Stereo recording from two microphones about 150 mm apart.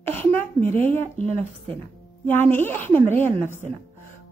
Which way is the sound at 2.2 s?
15° left (ahead or behind).